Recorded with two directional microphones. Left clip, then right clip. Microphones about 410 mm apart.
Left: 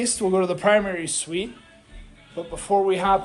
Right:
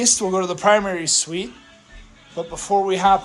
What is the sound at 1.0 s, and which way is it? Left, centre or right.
Speech, right.